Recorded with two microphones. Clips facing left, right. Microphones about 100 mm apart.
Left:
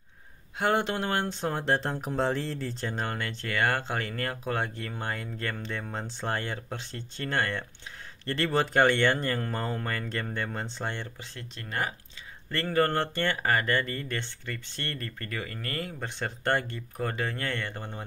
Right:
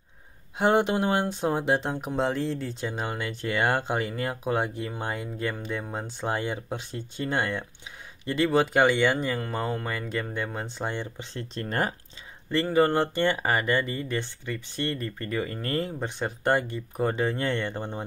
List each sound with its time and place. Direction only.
0.6 s speech: 15° right (ahead or behind)
11.1 s speech: 30° right (ahead or behind)
12.4 s speech: 15° right (ahead or behind)